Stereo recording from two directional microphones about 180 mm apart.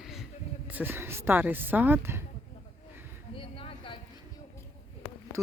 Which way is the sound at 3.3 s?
30° left (ahead or behind).